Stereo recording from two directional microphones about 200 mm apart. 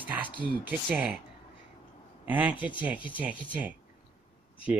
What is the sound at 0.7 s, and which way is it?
Speech, 5° right (ahead or behind).